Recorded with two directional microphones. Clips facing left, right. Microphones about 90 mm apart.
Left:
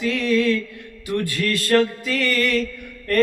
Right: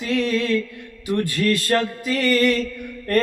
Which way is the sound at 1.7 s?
25° right (ahead or behind).